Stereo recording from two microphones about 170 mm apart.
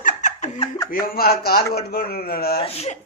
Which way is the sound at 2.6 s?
35° left (ahead or behind).